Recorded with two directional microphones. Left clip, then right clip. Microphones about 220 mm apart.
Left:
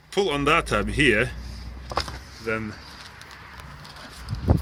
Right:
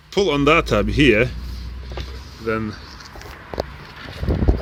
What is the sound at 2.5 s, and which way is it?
Speech, 10° right (ahead or behind).